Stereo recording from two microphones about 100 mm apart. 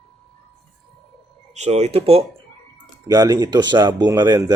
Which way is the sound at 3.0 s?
40° right (ahead or behind).